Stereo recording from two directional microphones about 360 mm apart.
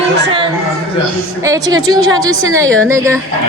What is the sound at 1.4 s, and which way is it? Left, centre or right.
Speech, centre.